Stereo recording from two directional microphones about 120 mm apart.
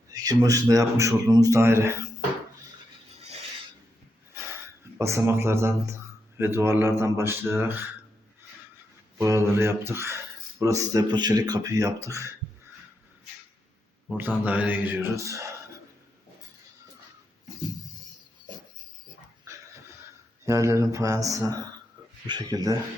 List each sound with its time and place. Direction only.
0.1 s a man's voice: 30° right (ahead or behind)
4.9 s a man's voice: 25° right (ahead or behind)
9.1 s a man's voice: 25° right (ahead or behind)
14.2 s mantra: 15° right (ahead or behind)
15.1 s a man's voice: 25° right (ahead or behind)
20.4 s a man's voice: 25° right (ahead or behind)